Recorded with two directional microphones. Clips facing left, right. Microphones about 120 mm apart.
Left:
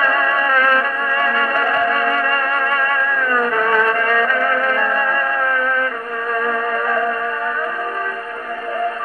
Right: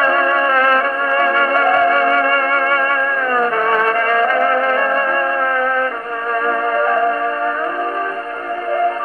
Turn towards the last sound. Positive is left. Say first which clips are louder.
# right 4 dB
turn(degrees=-25)  # may be behind; listen again after turning